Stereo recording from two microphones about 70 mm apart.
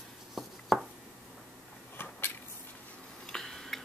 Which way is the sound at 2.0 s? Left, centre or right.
Left.